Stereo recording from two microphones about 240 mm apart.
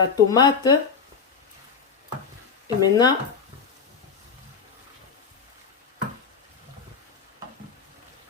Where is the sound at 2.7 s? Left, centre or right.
Centre.